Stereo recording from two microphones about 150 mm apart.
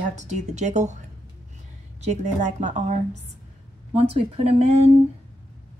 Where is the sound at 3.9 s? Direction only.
40° right (ahead or behind).